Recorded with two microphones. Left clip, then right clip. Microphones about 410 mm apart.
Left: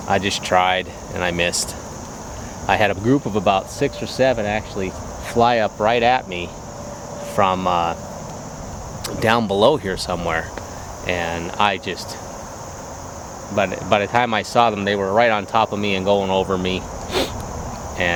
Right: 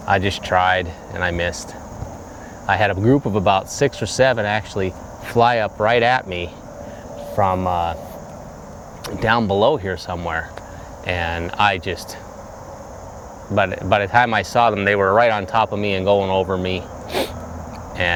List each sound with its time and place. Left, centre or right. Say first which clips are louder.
0.1 s speech: even; right
2.6 s speech: right 1 dB; right
5.3 s speech: even; right
7.3 s speech: left 1 dB; right
9.0 s speech: even; right
11.0 s speech: even; right
13.6 s speech: right 1 dB; right
18.0 s speech: right 1 dB; right